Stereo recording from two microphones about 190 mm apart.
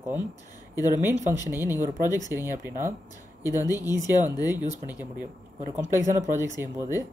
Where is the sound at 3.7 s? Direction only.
20° left (ahead or behind).